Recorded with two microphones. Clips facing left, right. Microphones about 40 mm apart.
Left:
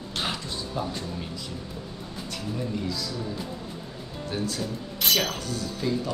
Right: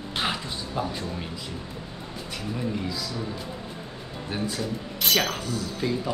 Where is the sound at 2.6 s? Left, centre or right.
Centre.